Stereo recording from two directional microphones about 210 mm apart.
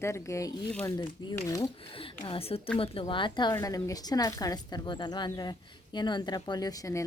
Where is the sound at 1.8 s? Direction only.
25° left (ahead or behind).